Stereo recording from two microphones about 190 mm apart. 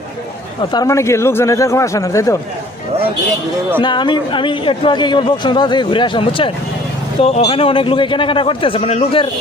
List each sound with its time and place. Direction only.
0.7 s speech: 20° left (ahead or behind)
3.8 s a man's voice: 25° left (ahead or behind)